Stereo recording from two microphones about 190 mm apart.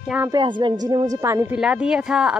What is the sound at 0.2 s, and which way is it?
A woman's voice, 20° right (ahead or behind).